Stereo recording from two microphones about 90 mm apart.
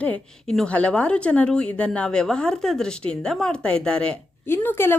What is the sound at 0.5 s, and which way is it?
Speech, 10° left (ahead or behind).